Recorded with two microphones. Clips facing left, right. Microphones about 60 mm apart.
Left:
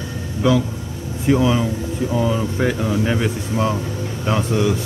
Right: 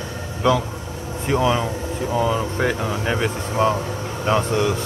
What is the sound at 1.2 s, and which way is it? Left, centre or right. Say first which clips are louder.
A man's voice: left 3 dB; centre.